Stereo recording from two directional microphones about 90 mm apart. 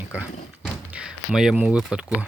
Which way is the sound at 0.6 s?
10° right (ahead or behind).